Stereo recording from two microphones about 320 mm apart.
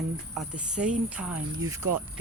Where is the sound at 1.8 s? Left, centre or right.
Right.